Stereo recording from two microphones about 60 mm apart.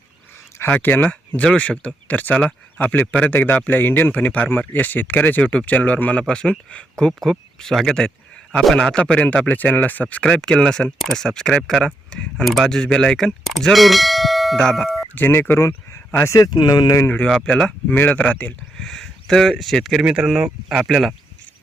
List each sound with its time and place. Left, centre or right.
0.7 s speech: left
1.1 s speech: centre
7.2 s speech: centre
10.9 s speech: centre
12.6 s church bell: centre
14.6 s speech: centre
15.1 s speech: left
15.4 s speech: left
16.2 s speech: left
17.2 s speech: centre
17.9 s speech: left
18.8 s speech: centre
20.0 s speech: centre